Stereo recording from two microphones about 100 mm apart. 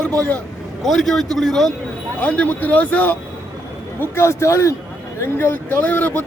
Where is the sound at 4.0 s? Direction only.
25° left (ahead or behind).